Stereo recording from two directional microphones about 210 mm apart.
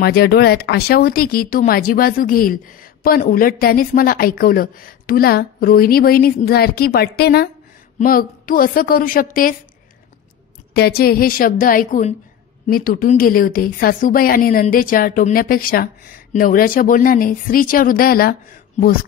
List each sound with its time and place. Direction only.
0.0 s speech: 50° left (ahead or behind)
10.7 s speech: 50° left (ahead or behind)